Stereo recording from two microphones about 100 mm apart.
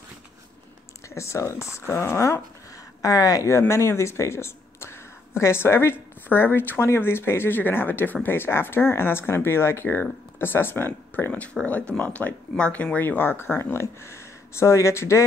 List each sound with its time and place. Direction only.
1.0 s speech: 30° left (ahead or behind)